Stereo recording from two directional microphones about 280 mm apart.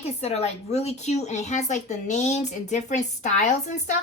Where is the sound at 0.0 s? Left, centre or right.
Left.